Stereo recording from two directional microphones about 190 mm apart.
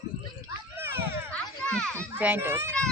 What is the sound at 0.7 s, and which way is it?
Children playing, 10° right (ahead or behind).